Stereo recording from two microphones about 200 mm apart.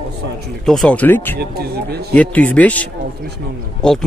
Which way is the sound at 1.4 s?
50° right (ahead or behind).